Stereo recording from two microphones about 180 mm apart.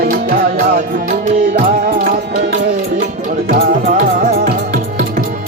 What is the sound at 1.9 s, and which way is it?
Music, 55° right (ahead or behind).